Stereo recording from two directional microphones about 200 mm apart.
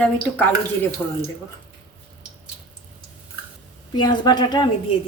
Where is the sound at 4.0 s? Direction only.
20° left (ahead or behind).